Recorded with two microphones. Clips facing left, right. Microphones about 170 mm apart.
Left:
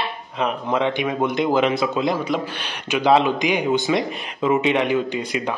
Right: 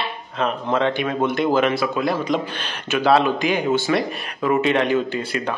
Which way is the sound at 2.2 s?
5° left (ahead or behind).